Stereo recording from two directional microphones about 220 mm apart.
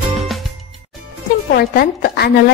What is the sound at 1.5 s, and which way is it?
Speech, 45° left (ahead or behind).